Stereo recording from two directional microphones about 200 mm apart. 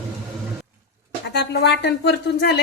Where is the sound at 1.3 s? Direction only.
60° left (ahead or behind).